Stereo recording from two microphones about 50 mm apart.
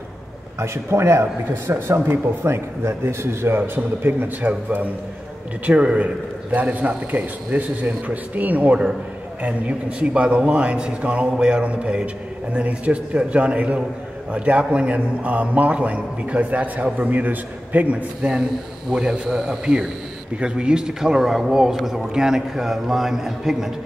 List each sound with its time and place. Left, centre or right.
0.6 s a man's voice: right
18.9 s a man's voice: centre
19.6 s a man's voice: centre